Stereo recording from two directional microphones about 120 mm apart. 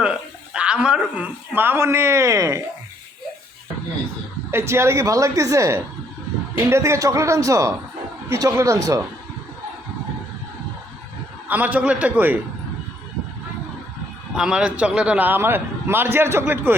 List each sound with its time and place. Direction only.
0.0 s speech: 10° right (ahead or behind); by 2.6 s 25° right (ahead or behind)
4.5 s a woman's voice: 20° right (ahead or behind)
11.4 s speech: 15° right (ahead or behind)
14.3 s speech: 5° right (ahead or behind)